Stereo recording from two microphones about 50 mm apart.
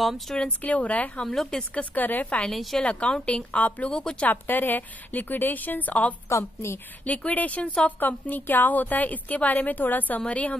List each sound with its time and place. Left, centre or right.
0.5 s a woman's voice: left
1.2 s speech: centre
1.6 s a woman's voice: left
2.5 s a woman's voice: centre
2.8 s a woman's voice: left
3.5 s a woman's voice: left
3.9 s speech: centre
4.3 s a woman's voice: left
6.2 s a woman's voice: left
7.1 s a woman's voice: left